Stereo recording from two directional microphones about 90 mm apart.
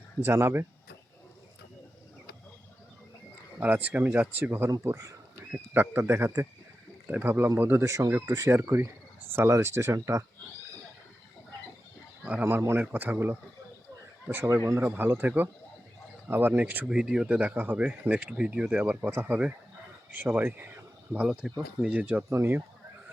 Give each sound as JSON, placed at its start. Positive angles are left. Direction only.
{"t": 0.3, "sound": "speech", "side_deg": -25}
{"t": 3.6, "sound": "speech", "side_deg": -20}
{"t": 5.5, "sound": "speech", "side_deg": -20}
{"t": 7.9, "sound": "speech", "side_deg": -40}
{"t": 12.4, "sound": "speech", "side_deg": -25}
{"t": 14.4, "sound": "speech", "side_deg": -35}
{"t": 22.3, "sound": "speech", "side_deg": -25}